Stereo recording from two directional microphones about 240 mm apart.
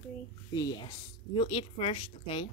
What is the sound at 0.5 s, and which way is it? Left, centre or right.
Speech, centre.